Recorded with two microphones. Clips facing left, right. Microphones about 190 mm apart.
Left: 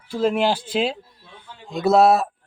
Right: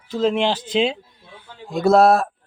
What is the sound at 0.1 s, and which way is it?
Speech, 10° left (ahead or behind).